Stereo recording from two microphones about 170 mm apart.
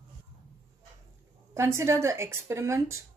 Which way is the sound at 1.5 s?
15° right (ahead or behind).